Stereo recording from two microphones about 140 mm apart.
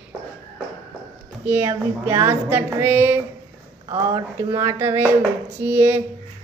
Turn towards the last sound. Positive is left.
turn(degrees=-15)  # may be behind; listen again after turning